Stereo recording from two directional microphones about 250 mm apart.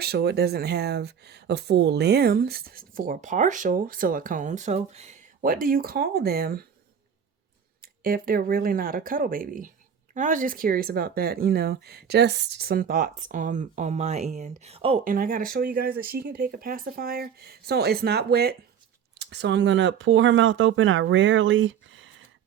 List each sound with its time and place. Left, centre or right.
0.0 s speech: right
7.8 s speech: right
15.1 s speech: right